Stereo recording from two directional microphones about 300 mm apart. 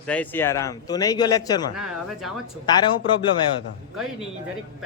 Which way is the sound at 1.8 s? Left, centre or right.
Centre.